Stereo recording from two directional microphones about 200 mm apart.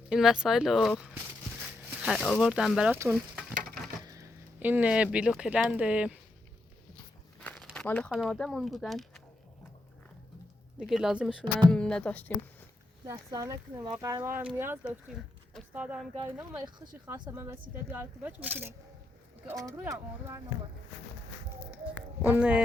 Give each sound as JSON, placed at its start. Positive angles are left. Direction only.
{"t": 0.1, "sound": "speech", "side_deg": -5}
{"t": 4.0, "sound": "a sound", "side_deg": -15}
{"t": 5.1, "sound": "speech", "side_deg": -5}
{"t": 7.3, "sound": "a sound", "side_deg": 5}
{"t": 8.1, "sound": "speech", "side_deg": 0}
{"t": 10.8, "sound": "speech", "side_deg": 0}
{"t": 13.1, "sound": "speech", "side_deg": -15}
{"t": 17.1, "sound": "speech", "side_deg": -20}
{"t": 19.7, "sound": "speech", "side_deg": -10}
{"t": 22.2, "sound": "speech", "side_deg": -5}